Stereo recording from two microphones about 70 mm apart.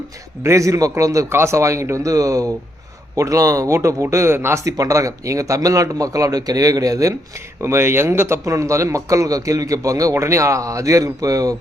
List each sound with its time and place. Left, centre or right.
0.4 s a man's voice: right
1.3 s a man's voice: right
4.6 s speech: right
7.6 s a man's voice: right